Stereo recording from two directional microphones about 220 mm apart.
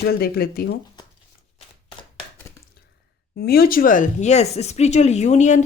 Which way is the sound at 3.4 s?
45° left (ahead or behind).